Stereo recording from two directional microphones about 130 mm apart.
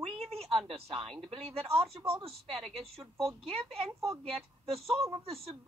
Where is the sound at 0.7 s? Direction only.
50° right (ahead or behind).